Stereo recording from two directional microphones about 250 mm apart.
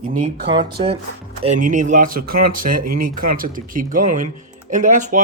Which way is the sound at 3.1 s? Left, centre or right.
Right.